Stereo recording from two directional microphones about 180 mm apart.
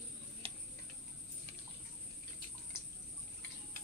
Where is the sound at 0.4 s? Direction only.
30° right (ahead or behind).